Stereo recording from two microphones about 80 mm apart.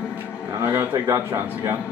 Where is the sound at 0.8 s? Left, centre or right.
Right.